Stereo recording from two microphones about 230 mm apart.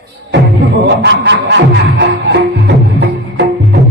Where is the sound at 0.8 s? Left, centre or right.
Right.